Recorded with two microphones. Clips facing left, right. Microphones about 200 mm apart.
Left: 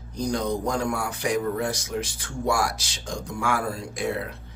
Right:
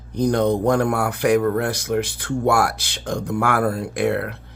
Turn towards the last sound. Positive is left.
turn(degrees=-65)  # may be behind; listen again after turning